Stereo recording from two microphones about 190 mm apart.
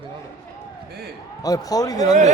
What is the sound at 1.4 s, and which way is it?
Speech, 20° left (ahead or behind).